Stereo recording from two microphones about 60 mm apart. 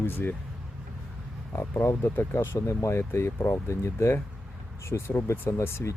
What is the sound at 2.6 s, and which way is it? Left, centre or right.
Speech, left.